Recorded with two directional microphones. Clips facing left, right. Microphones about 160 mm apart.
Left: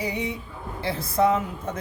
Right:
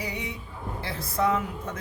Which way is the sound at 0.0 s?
25° left (ahead or behind).